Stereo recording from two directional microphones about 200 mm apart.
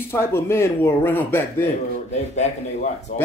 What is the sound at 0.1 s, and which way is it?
Speech, 10° left (ahead or behind).